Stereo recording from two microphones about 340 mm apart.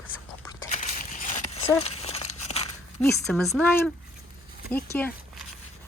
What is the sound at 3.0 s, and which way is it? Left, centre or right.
Speech, centre.